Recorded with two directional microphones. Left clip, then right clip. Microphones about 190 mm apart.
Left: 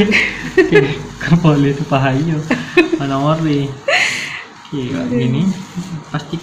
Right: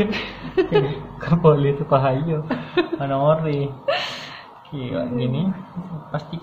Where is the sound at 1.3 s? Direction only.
35° right (ahead or behind).